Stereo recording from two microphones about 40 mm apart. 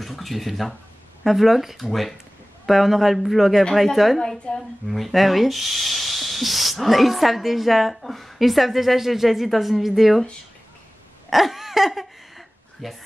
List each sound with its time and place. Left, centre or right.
0.0 s speech: centre
4.2 s a woman's voice: centre
4.8 s speech: centre
11.2 s a sound: centre